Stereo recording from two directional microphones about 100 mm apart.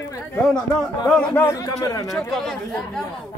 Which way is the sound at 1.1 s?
10° left (ahead or behind).